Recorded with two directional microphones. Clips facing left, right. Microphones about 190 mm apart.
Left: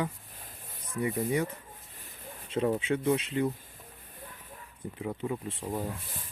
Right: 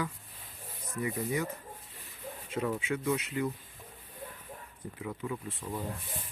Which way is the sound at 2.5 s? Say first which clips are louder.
Left 5 dB; 30° left (ahead or behind).